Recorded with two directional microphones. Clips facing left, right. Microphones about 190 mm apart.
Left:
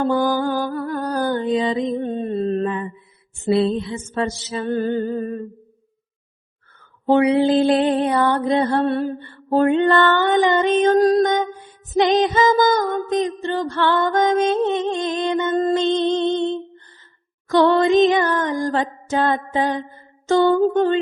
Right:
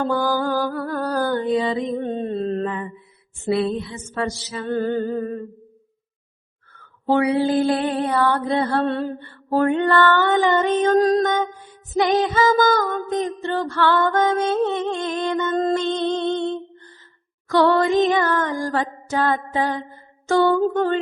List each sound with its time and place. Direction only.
0.1 s music: 20° left (ahead or behind)
3.5 s music: 25° left (ahead or behind)
7.1 s music: 20° left (ahead or behind)